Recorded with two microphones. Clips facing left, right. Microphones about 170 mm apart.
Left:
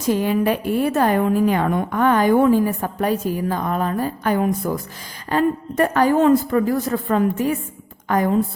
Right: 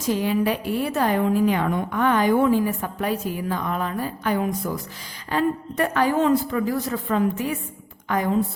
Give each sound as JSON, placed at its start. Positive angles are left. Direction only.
{"t": 0.2, "sound": "a woman's voice", "side_deg": 50}